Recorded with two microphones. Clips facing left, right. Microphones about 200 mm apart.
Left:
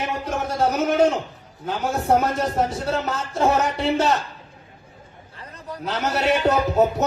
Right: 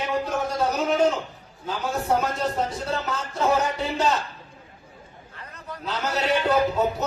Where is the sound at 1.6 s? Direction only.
75° left (ahead or behind).